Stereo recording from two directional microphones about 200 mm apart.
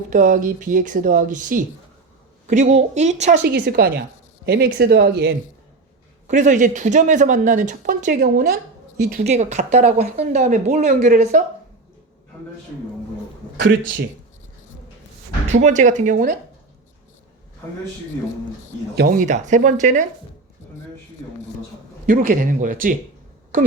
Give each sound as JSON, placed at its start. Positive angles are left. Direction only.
{"t": 0.1, "sound": "speech", "side_deg": -40}
{"t": 3.4, "sound": "a woman's voice", "side_deg": -50}
{"t": 6.2, "sound": "speech", "side_deg": -35}
{"t": 8.2, "sound": "a woman's voice", "side_deg": -50}
{"t": 9.2, "sound": "speech", "side_deg": -35}
{"t": 15.5, "sound": "speech", "side_deg": -35}
{"t": 18.9, "sound": "speech", "side_deg": -45}
{"t": 22.0, "sound": "speech", "side_deg": -40}